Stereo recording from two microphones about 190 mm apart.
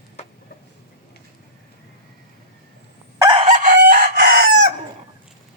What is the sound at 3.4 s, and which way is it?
Chicken, 40° right (ahead or behind).